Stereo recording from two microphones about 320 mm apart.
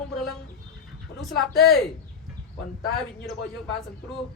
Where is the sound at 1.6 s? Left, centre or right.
Centre.